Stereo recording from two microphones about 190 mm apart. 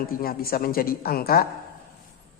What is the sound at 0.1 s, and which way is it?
A woman's voice, 50° left (ahead or behind).